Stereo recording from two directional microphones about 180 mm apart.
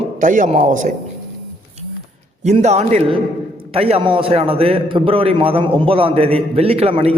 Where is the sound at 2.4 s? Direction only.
40° right (ahead or behind).